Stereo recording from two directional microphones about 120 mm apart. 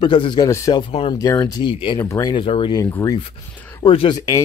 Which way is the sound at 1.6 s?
45° left (ahead or behind).